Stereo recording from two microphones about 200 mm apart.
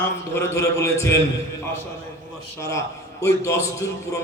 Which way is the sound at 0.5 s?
15° left (ahead or behind).